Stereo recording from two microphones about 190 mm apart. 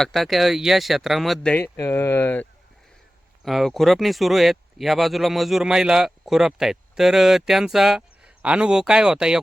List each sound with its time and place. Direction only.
0.0 s speech: centre (ahead or behind)
1.7 s speech: 15° left (ahead or behind); by 9.4 s 5° right (ahead or behind)